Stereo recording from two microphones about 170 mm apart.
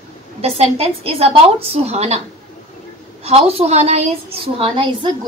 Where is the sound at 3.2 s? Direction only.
35° right (ahead or behind).